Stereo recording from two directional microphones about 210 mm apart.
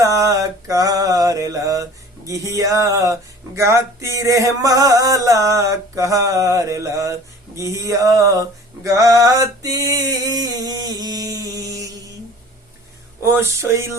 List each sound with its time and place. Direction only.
0.0 s mantra: 15° right (ahead or behind)
10.0 s a sound: 15° right (ahead or behind)
13.2 s mantra: 10° right (ahead or behind)